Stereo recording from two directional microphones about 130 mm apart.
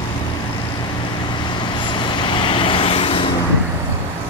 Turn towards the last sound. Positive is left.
turn(degrees=40)  # may be behind; listen again after turning